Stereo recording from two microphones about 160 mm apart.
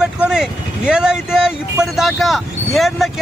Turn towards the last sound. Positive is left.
turn(degrees=0)  # may be behind; listen again after turning